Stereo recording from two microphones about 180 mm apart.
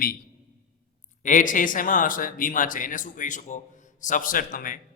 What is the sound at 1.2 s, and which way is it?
A man's voice, 45° left (ahead or behind).